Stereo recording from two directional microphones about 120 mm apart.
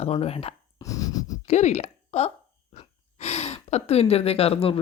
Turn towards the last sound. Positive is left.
turn(degrees=55)  # may be behind; listen again after turning